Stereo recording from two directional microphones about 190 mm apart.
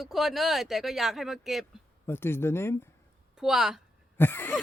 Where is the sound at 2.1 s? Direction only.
10° left (ahead or behind).